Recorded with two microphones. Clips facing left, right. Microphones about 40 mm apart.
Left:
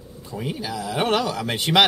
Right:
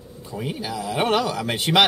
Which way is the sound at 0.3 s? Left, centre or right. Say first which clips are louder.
Even; centre.